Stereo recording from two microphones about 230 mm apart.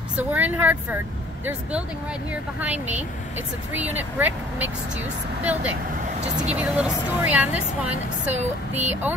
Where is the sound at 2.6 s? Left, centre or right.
Centre.